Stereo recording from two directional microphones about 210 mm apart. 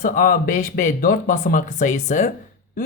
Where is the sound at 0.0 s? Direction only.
40° left (ahead or behind).